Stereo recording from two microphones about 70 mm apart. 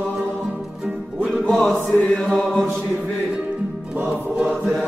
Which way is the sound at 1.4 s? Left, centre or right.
Centre.